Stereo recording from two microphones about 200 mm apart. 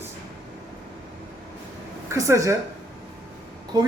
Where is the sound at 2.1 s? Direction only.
15° right (ahead or behind).